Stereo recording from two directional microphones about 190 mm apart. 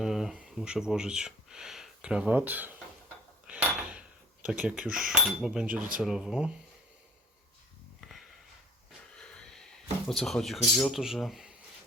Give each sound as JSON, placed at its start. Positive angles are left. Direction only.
{"t": 0.0, "sound": "speech", "side_deg": 0}
{"t": 3.4, "sound": "dishes", "side_deg": -5}
{"t": 4.4, "sound": "speech", "side_deg": -5}
{"t": 8.0, "sound": "sniff", "side_deg": 0}
{"t": 9.1, "sound": "speech", "side_deg": 5}